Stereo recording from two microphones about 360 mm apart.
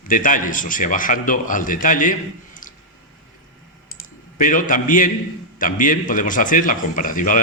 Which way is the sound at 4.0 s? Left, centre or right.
Left.